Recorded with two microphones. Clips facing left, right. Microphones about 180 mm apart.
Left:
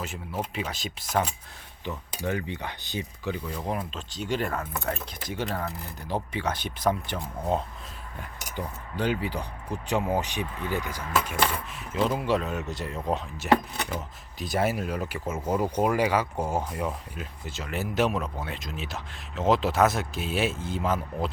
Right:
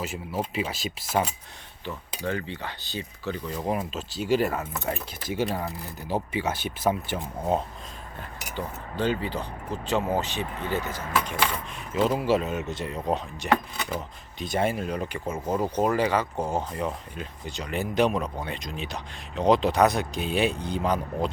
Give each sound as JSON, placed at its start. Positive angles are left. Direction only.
{"t": 0.0, "sound": "speech", "side_deg": -5}
{"t": 2.2, "sound": "cutlery", "side_deg": 15}
{"t": 3.5, "sound": "speech", "side_deg": -5}
{"t": 8.5, "sound": "cutlery", "side_deg": 10}
{"t": 11.9, "sound": "speech", "side_deg": 0}